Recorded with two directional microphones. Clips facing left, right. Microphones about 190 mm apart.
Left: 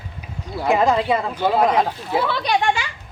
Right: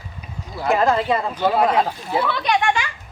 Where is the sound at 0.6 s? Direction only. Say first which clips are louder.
Left 1 dB; 15° left (ahead or behind).